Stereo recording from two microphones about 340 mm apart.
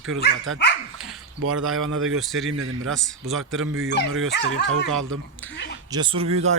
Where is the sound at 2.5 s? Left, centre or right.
Right.